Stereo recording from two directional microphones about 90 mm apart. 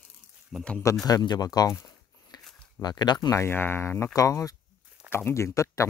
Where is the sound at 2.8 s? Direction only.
50° left (ahead or behind).